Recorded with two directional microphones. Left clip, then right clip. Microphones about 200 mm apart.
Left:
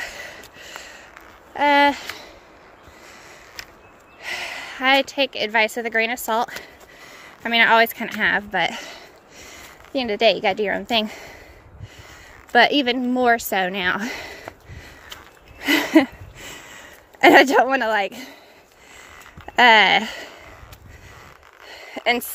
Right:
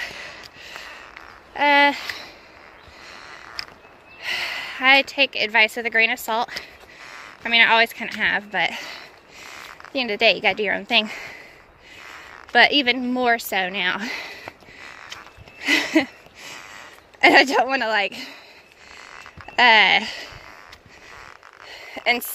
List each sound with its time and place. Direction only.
0.0 s snort: 30° left (ahead or behind)
1.5 s speech: 15° left (ahead or behind)
4.2 s a woman's voice: 10° left (ahead or behind)
6.6 s a sound: 25° left (ahead or behind)
12.0 s speech: 20° left (ahead or behind)
15.6 s a sound: 30° left (ahead or behind)
17.2 s a woman's voice: 20° left (ahead or behind)
19.5 s speech: 25° left (ahead or behind)
21.6 s a sound: 25° left (ahead or behind)